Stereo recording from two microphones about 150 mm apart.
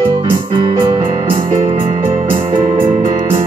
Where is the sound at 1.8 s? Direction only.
50° right (ahead or behind).